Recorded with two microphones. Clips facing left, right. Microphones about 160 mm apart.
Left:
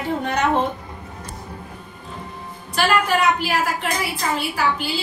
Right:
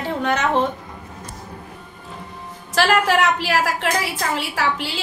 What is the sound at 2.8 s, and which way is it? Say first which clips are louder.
A woman's voice: right 2 dB; 90° right.